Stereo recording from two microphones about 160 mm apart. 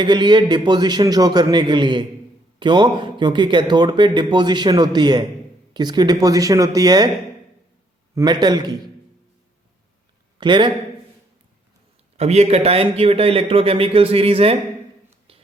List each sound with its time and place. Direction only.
0.0 s speech: 30° right (ahead or behind)
8.1 s speech: 25° right (ahead or behind)
10.4 s speech: 30° right (ahead or behind)
12.1 s speech: 40° right (ahead or behind)